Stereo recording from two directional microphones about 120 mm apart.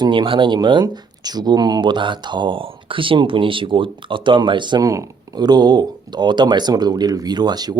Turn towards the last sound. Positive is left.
turn(degrees=-35)  # may be behind; listen again after turning